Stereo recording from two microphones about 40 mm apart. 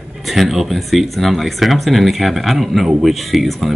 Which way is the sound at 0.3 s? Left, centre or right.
Centre.